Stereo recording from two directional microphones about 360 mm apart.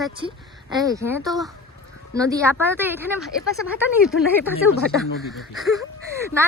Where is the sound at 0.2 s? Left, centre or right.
Centre.